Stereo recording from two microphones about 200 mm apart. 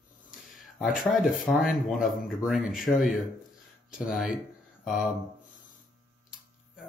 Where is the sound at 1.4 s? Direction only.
Centre (ahead or behind).